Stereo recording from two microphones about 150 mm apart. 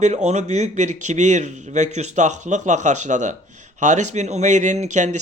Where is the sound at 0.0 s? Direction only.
50° right (ahead or behind).